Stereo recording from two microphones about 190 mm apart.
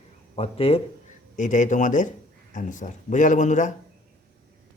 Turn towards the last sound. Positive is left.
turn(degrees=40)  # may be behind; listen again after turning